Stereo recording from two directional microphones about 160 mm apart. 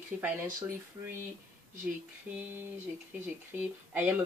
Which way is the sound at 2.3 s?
10° right (ahead or behind).